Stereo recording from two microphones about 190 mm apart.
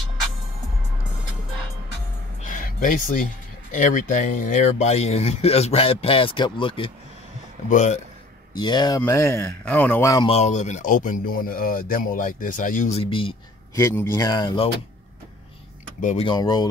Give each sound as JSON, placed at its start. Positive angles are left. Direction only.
{"t": 2.4, "sound": "a sound", "side_deg": 45}
{"t": 3.7, "sound": "speech", "side_deg": 40}
{"t": 7.7, "sound": "speech", "side_deg": 40}
{"t": 8.5, "sound": "speech", "side_deg": 20}
{"t": 10.2, "sound": "speech", "side_deg": 35}
{"t": 13.0, "sound": "speech", "side_deg": 25}
{"t": 13.7, "sound": "speech", "side_deg": 15}
{"t": 16.0, "sound": "speech", "side_deg": 40}
{"t": 16.3, "sound": "speech", "side_deg": 20}